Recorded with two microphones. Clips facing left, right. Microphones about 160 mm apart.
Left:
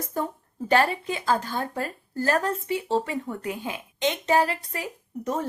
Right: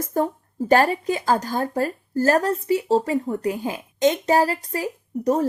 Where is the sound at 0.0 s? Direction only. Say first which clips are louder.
Right 7 dB; 45° right (ahead or behind).